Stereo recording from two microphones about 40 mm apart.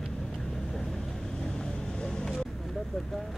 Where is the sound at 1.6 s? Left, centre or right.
Centre.